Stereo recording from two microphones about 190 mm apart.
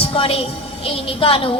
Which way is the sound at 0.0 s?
30° left (ahead or behind).